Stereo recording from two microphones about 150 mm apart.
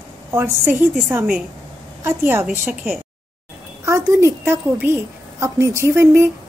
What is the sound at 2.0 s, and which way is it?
Speech, 15° right (ahead or behind).